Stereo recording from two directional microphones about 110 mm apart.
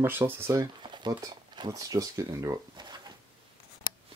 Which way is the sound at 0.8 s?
45° right (ahead or behind).